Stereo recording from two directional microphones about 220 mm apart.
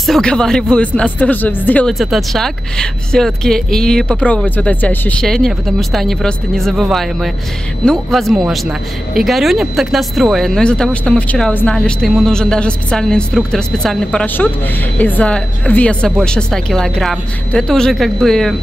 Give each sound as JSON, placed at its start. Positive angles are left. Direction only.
{"t": 0.0, "sound": "speech", "side_deg": 5}